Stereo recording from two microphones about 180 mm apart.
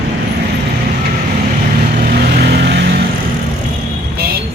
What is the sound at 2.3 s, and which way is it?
Music, 65° right (ahead or behind).